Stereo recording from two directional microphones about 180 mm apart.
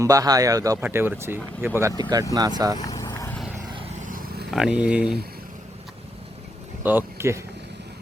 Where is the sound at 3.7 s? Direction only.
35° right (ahead or behind).